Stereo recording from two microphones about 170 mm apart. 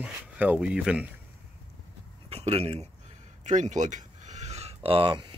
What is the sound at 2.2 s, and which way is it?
Speech, 35° right (ahead or behind).